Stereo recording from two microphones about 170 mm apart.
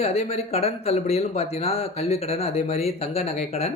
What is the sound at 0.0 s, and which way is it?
Speech, 35° left (ahead or behind).